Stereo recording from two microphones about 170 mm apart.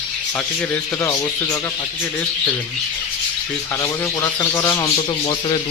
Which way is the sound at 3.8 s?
20° left (ahead or behind).